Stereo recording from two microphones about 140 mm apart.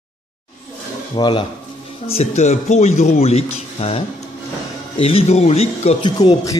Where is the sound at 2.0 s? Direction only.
50° left (ahead or behind).